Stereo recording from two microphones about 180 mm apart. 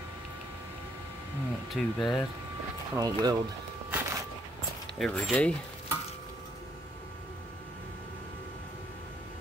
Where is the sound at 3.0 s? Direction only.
20° right (ahead or behind).